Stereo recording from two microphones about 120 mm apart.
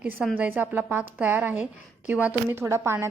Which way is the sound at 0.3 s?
15° right (ahead or behind).